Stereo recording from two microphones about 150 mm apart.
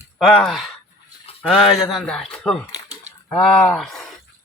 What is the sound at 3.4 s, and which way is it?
Speech, 5° left (ahead or behind).